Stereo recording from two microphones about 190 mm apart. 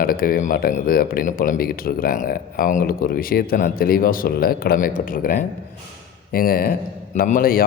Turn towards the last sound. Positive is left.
turn(degrees=50)  # may be behind; listen again after turning